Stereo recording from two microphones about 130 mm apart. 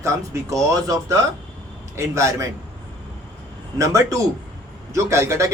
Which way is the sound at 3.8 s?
25° right (ahead or behind).